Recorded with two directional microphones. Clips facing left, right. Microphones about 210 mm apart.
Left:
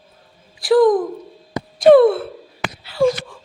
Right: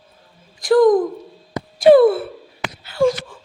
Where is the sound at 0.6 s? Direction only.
Centre (ahead or behind).